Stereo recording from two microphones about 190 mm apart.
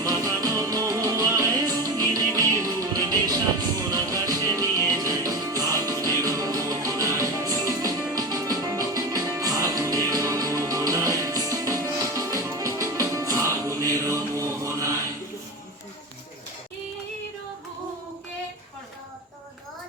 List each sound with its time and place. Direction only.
0.0 s music: 20° right (ahead or behind)